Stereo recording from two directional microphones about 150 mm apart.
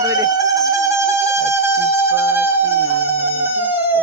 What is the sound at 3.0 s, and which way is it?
Insect, 15° right (ahead or behind).